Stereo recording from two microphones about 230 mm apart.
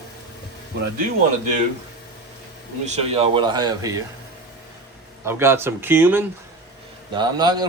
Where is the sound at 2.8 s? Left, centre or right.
Right.